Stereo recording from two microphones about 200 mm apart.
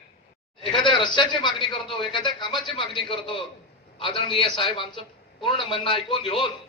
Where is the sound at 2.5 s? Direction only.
Centre (ahead or behind).